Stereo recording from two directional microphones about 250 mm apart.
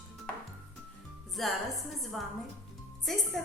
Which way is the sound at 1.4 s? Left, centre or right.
Centre.